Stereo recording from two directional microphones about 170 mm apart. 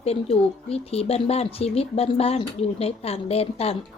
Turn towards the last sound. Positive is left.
turn(degrees=35)  # may be behind; listen again after turning